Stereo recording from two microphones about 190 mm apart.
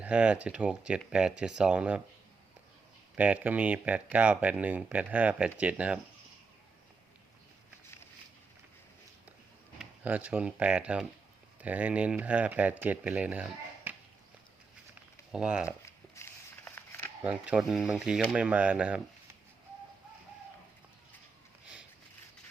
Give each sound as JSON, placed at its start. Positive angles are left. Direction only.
{"t": 0.0, "sound": "speech", "side_deg": -5}
{"t": 3.2, "sound": "speech", "side_deg": -10}
{"t": 9.7, "sound": "speech", "side_deg": -10}
{"t": 15.3, "sound": "speech", "side_deg": -5}
{"t": 15.9, "sound": "a sound", "side_deg": 15}
{"t": 17.2, "sound": "speech", "side_deg": -5}